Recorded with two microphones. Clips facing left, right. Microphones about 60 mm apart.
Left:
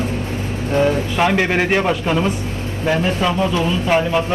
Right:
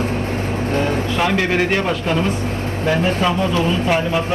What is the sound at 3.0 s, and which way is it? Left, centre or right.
Speech, centre.